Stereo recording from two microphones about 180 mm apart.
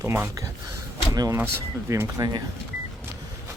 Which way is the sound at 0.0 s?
15° right (ahead or behind).